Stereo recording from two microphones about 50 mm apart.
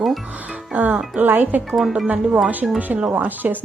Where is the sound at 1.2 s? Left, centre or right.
Right.